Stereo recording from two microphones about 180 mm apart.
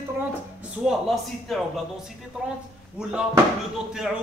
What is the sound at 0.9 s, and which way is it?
A man's voice, centre (ahead or behind).